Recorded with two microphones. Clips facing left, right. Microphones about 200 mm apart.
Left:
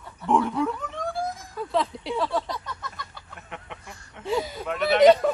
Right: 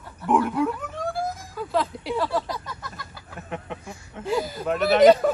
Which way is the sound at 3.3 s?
40° right (ahead or behind).